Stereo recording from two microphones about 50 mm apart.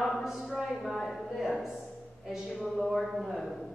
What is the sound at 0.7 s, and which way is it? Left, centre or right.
Speech, centre.